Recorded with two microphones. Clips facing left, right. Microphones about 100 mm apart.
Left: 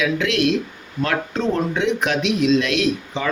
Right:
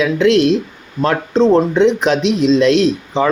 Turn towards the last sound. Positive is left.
turn(degrees=-30)  # may be behind; listen again after turning